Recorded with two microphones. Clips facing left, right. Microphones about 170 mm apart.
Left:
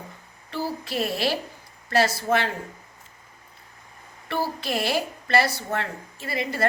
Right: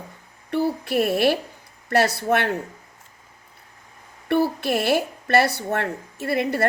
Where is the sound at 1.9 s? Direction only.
65° right (ahead or behind).